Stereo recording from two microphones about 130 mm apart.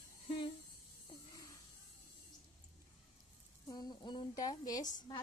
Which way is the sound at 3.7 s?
35° left (ahead or behind).